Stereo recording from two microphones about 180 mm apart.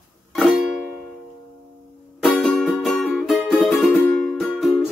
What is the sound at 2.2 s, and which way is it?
Music, centre (ahead or behind).